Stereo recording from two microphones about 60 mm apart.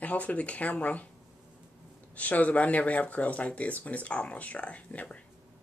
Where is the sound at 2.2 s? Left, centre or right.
Left.